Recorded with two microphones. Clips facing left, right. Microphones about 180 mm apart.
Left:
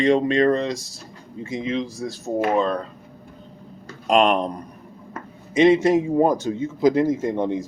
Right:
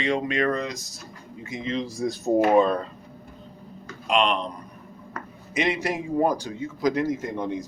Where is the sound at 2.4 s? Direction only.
5° right (ahead or behind).